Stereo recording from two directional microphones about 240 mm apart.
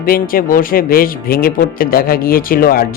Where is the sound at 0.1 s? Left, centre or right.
Left.